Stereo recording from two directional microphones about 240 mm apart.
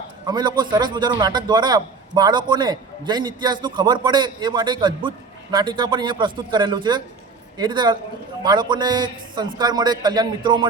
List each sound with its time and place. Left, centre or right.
0.3 s a man's voice: centre